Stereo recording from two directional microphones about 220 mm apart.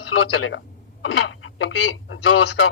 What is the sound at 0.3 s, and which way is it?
Speech, 65° left (ahead or behind).